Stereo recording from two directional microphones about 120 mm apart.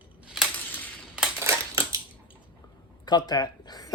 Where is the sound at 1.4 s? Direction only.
25° right (ahead or behind).